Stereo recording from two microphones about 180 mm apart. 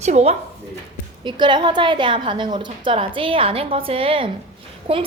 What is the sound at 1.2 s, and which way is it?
A woman's voice, 25° right (ahead or behind).